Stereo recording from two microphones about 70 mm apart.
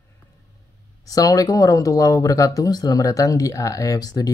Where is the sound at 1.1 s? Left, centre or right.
Left.